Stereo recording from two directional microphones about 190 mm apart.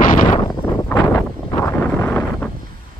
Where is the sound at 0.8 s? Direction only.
10° left (ahead or behind).